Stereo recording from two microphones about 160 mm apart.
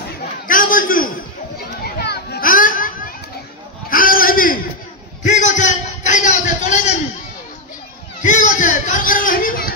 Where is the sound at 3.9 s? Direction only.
60° left (ahead or behind).